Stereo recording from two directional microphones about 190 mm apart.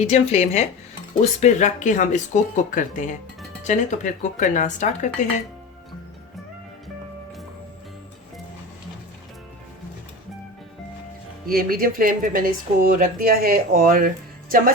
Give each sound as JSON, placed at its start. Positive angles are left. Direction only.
{"t": 0.0, "sound": "speech", "side_deg": 35}
{"t": 11.4, "sound": "speech", "side_deg": -50}